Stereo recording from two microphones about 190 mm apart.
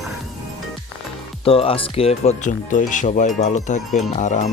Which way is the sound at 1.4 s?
30° left (ahead or behind).